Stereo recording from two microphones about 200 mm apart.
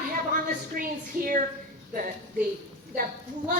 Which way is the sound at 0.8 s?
45° right (ahead or behind).